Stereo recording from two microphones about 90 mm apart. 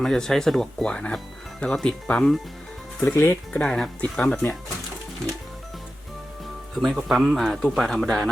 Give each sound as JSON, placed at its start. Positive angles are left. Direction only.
{"t": 0.0, "sound": "speech", "side_deg": 5}
{"t": 3.2, "sound": "speech", "side_deg": 25}
{"t": 3.6, "sound": "speech", "side_deg": 10}
{"t": 6.7, "sound": "speech", "side_deg": 0}